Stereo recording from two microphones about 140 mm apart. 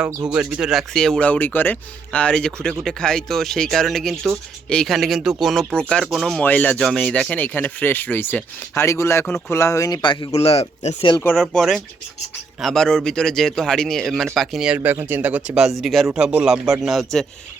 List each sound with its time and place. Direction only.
0.3 s speech: 5° right (ahead or behind); by 10.0 s 20° left (ahead or behind)
10.0 s speech: 35° left (ahead or behind)
10.3 s speech: 45° left (ahead or behind)
11.2 s speech: 10° left (ahead or behind)
14.8 s speech: 15° right (ahead or behind); by 17.2 s centre (ahead or behind)